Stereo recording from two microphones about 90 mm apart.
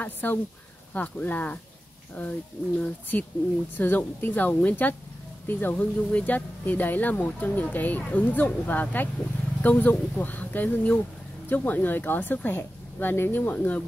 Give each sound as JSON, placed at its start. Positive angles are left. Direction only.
{"t": 0.0, "sound": "speech", "side_deg": 20}